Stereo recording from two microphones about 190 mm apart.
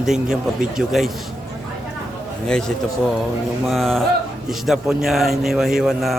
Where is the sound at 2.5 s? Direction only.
5° left (ahead or behind).